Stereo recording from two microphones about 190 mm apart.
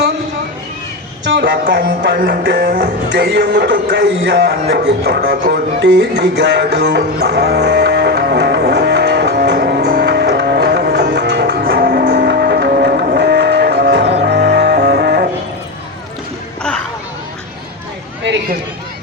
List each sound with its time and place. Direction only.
1.3 s music: 60° right (ahead or behind)
3.2 s speech: 65° right (ahead or behind)
4.7 s music: 60° right (ahead or behind)